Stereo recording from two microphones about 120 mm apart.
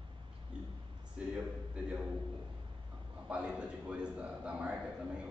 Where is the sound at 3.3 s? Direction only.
10° right (ahead or behind).